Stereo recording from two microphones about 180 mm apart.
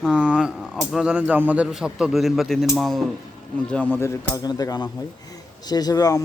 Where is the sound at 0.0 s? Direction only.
5° right (ahead or behind); by 4.1 s 10° left (ahead or behind).